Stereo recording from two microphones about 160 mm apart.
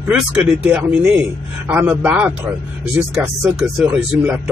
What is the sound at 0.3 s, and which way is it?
Speech, 10° right (ahead or behind).